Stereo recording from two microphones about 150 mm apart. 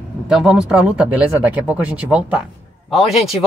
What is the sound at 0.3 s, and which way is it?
A man's voice, 5° right (ahead or behind).